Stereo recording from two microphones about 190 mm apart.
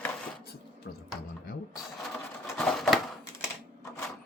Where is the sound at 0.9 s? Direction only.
60° left (ahead or behind).